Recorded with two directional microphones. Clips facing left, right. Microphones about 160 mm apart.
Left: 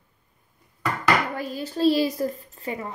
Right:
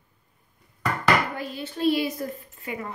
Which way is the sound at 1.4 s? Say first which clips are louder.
Left 4 dB; 40° left (ahead or behind).